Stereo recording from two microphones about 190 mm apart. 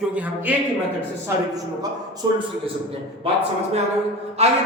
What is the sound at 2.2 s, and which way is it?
Speech, 20° right (ahead or behind).